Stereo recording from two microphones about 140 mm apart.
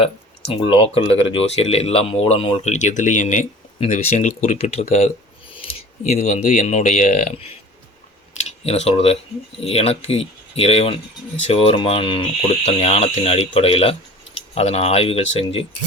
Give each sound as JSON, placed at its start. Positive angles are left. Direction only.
{"t": 0.5, "sound": "speech", "side_deg": 40}
{"t": 8.6, "sound": "speech", "side_deg": 50}